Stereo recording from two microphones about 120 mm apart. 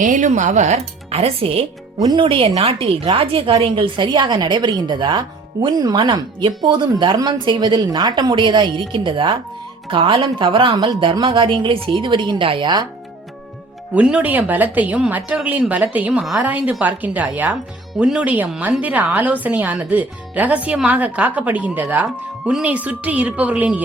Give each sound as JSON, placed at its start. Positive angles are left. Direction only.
{"t": 0.0, "sound": "speech", "side_deg": -90}
{"t": 2.0, "sound": "a woman's voice", "side_deg": -40}
{"t": 13.9, "sound": "a woman's voice", "side_deg": -10}